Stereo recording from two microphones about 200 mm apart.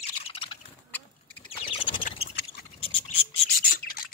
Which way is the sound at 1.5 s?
25° left (ahead or behind).